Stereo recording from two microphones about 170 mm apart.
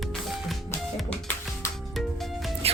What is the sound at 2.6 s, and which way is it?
Music, 35° right (ahead or behind).